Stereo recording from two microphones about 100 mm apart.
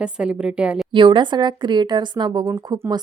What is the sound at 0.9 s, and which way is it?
A woman's voice, 55° right (ahead or behind).